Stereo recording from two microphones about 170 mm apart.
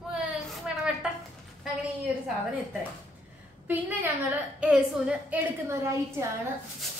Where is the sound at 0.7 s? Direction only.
5° right (ahead or behind).